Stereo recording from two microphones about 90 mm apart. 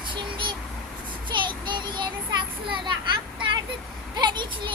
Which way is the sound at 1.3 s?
60° right (ahead or behind).